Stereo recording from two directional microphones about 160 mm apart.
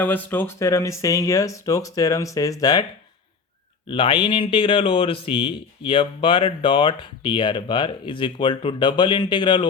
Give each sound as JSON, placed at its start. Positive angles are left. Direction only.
{"t": 0.0, "sound": "speech", "side_deg": 10}
{"t": 3.8, "sound": "speech", "side_deg": 35}